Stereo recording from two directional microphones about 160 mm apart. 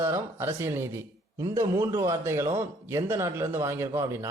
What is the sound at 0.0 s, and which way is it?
A man's voice, 15° right (ahead or behind).